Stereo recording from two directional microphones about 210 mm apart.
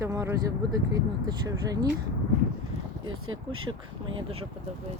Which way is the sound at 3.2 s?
75° right (ahead or behind).